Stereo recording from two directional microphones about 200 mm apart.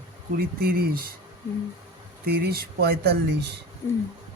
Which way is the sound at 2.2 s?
50° right (ahead or behind).